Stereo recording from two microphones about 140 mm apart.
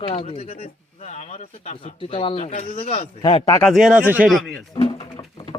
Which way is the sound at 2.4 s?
55° left (ahead or behind).